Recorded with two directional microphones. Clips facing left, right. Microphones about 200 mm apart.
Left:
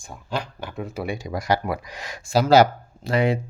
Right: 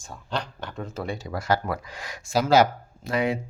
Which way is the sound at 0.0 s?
10° left (ahead or behind).